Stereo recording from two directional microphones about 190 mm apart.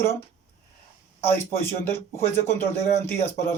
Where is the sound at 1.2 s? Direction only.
10° left (ahead or behind).